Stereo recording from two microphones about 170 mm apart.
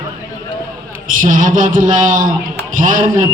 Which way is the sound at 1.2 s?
50° right (ahead or behind).